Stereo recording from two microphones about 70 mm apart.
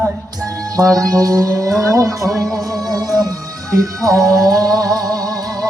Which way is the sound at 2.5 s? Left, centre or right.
Right.